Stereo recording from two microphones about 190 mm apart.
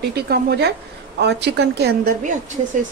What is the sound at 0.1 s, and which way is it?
A woman's voice, 60° right (ahead or behind).